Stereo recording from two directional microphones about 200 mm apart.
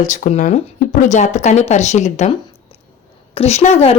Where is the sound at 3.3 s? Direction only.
30° left (ahead or behind).